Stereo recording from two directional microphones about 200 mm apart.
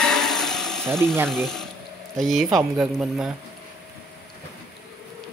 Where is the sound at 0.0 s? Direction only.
Centre (ahead or behind).